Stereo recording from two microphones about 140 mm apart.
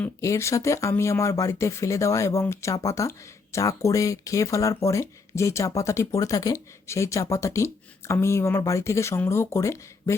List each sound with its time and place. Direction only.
0.2 s speech: 20° left (ahead or behind)